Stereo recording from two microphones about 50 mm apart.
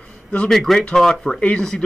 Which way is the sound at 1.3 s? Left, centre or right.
Left.